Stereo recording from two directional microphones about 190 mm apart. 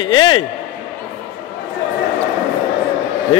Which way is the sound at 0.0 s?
25° left (ahead or behind).